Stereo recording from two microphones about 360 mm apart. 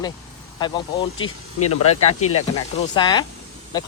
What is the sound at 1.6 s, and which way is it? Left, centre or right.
Speech, left.